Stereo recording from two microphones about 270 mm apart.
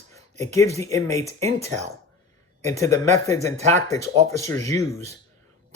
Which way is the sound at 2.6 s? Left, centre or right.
Centre.